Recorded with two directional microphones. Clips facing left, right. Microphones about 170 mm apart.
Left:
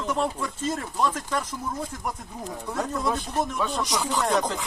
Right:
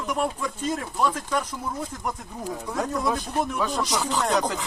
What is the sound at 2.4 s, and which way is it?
Speech, 10° right (ahead or behind).